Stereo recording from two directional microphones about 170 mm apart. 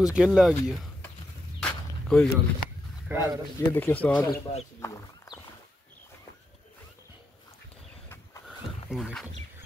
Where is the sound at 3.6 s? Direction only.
10° left (ahead or behind).